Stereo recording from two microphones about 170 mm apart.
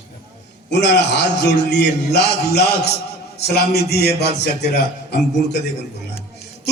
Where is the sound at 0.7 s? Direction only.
90° left.